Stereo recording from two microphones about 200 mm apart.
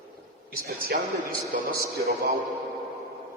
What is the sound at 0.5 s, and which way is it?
Speech, 45° right (ahead or behind).